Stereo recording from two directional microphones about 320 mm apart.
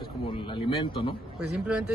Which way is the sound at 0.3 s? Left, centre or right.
Centre.